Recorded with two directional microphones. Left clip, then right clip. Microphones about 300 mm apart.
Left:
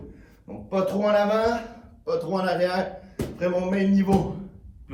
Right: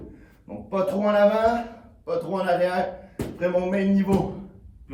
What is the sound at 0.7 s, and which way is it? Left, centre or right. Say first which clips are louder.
Speech: even; centre.